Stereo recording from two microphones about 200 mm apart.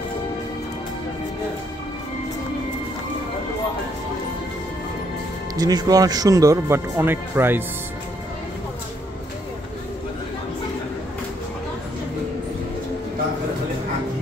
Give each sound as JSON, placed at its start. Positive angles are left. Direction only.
{"t": 5.6, "sound": "speech", "side_deg": -20}